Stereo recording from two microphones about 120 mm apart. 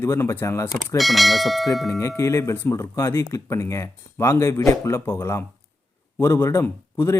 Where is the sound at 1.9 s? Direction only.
25° left (ahead or behind).